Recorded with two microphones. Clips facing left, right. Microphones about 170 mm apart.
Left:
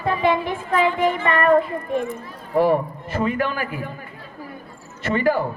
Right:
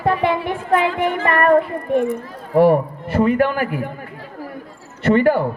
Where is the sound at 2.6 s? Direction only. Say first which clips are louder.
Right 5 dB; 60° right (ahead or behind).